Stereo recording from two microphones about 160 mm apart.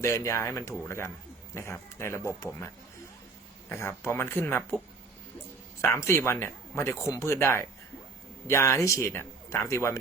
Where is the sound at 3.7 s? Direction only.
15° left (ahead or behind).